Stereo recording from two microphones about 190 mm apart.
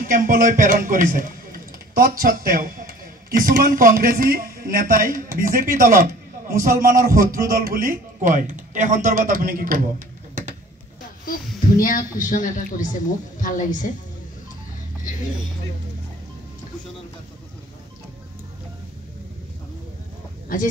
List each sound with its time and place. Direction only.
0.0 s a man's voice: 45° right (ahead or behind)
6.7 s speech: 15° right (ahead or behind)
7.0 s a man's voice: 50° right (ahead or behind)
11.8 s speech: 45° left (ahead or behind)
20.5 s speech: 45° left (ahead or behind)